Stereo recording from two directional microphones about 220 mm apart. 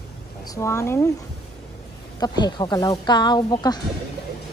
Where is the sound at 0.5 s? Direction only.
15° left (ahead or behind).